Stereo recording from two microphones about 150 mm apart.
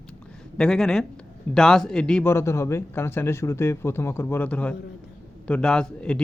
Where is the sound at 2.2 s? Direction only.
15° left (ahead or behind).